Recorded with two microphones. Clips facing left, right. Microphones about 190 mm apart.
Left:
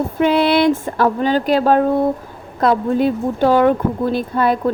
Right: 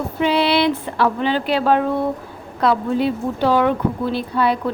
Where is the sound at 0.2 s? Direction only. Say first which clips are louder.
Left 3 dB; 50° left (ahead or behind).